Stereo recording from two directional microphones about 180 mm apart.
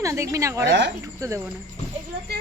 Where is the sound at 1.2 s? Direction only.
15° right (ahead or behind).